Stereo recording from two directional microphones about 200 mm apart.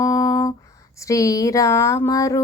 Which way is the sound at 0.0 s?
15° left (ahead or behind).